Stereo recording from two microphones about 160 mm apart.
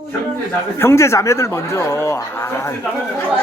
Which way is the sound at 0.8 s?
15° left (ahead or behind).